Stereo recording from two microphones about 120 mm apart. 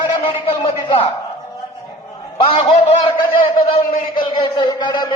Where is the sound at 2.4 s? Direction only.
45° left (ahead or behind).